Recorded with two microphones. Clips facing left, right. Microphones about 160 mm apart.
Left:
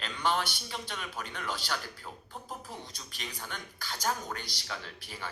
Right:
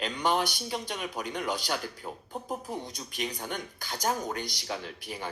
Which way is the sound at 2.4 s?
45° right (ahead or behind).